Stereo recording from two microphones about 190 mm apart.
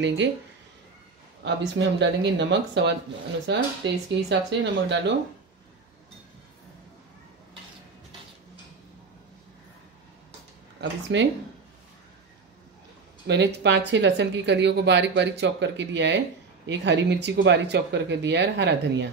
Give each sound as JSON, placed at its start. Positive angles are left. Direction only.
{"t": 1.4, "sound": "speech", "side_deg": -65}
{"t": 10.8, "sound": "speech", "side_deg": -75}
{"t": 13.3, "sound": "speech", "side_deg": -65}